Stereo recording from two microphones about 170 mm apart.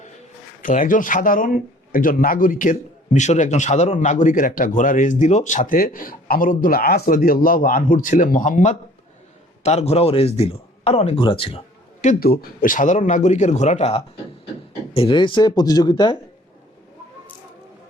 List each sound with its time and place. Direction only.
0.6 s speech: 50° left (ahead or behind); by 11.6 s 30° left (ahead or behind)
12.2 s speech: 60° left (ahead or behind); by 16.1 s 25° left (ahead or behind)